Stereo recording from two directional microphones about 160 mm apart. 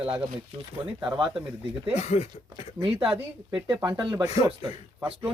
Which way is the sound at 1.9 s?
45° left (ahead or behind).